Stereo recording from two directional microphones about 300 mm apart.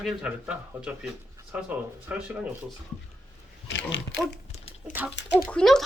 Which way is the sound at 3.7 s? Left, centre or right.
Left.